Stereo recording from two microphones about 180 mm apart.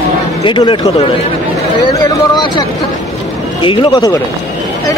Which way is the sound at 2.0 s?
20° left (ahead or behind).